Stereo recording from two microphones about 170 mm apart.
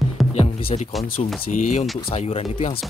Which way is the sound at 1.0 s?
55° left (ahead or behind).